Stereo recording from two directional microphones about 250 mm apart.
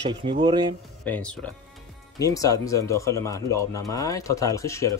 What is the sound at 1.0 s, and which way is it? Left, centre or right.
Speech, centre.